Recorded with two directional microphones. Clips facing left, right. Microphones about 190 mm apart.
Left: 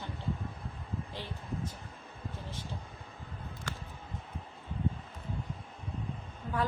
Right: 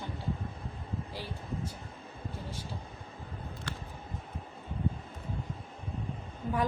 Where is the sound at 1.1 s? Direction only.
10° right (ahead or behind).